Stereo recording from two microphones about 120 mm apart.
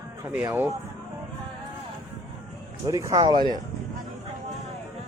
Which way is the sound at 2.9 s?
30° right (ahead or behind).